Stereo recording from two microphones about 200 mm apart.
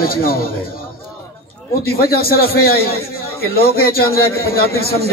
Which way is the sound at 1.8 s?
50° left (ahead or behind).